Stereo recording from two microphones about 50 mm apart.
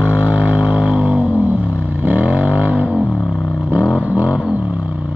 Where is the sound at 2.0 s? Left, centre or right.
Right.